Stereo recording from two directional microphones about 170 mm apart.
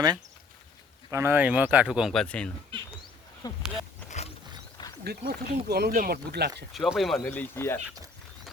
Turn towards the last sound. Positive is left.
turn(degrees=15)  # may be behind; listen again after turning